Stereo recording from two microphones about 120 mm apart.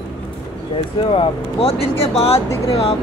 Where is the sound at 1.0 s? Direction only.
50° left (ahead or behind).